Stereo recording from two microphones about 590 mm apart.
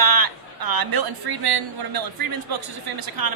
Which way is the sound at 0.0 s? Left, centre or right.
Right.